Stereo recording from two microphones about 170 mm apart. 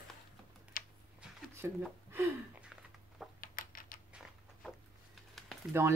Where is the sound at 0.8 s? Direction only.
55° left (ahead or behind).